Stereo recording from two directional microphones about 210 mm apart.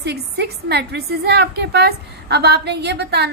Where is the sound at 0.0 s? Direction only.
50° right (ahead or behind).